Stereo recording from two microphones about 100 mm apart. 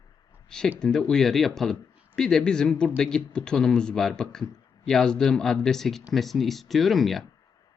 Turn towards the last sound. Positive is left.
turn(degrees=0)  # may be behind; listen again after turning